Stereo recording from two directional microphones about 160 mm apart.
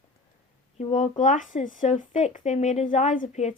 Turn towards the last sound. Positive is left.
turn(degrees=45)  # may be behind; listen again after turning